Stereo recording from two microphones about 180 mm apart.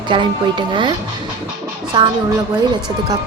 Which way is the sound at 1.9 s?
25° right (ahead or behind).